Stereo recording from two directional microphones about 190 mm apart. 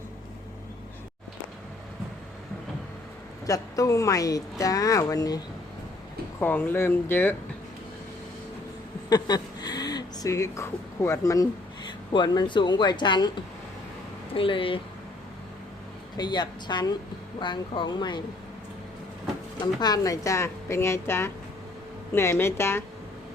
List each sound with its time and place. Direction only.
3.4 s a woman's voice: 15° left (ahead or behind)
6.4 s a woman's voice: 10° left (ahead or behind)
9.0 s a sound: 20° left (ahead or behind)
11.9 s speech: 25° left (ahead or behind)
16.1 s speech: 20° left (ahead or behind)
19.6 s a woman's voice: 20° left (ahead or behind)